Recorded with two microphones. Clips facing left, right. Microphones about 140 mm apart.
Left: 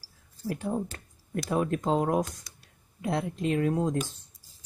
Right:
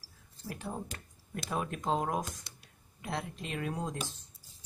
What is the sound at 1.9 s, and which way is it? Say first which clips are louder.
Speech: left 5 dB; 20° left (ahead or behind).